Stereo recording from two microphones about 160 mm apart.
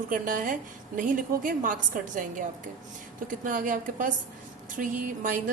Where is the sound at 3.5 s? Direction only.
55° right (ahead or behind).